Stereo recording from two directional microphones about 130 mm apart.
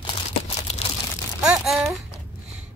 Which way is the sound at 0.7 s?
55° left (ahead or behind).